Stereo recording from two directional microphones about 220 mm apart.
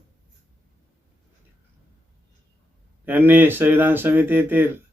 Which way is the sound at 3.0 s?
10° right (ahead or behind).